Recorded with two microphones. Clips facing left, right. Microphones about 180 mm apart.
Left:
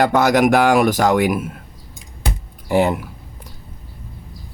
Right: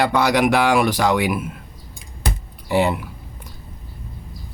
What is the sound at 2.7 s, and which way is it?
Speech, 45° left (ahead or behind).